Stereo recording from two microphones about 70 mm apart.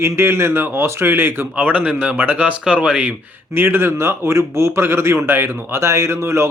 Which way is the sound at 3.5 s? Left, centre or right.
Right.